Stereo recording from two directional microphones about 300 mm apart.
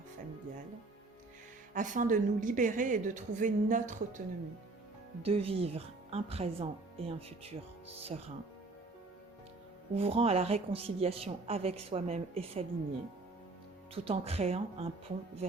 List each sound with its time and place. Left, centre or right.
1.7 s a woman's voice: right
5.2 s a woman's voice: centre
9.9 s a woman's voice: centre
13.9 s a woman's voice: centre